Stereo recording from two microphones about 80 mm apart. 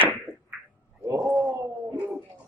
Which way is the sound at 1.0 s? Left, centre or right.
Right.